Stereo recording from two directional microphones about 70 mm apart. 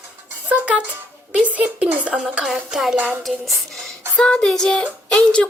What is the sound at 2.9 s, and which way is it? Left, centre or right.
Speech, right.